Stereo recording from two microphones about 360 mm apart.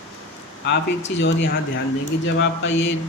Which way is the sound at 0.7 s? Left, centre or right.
Left.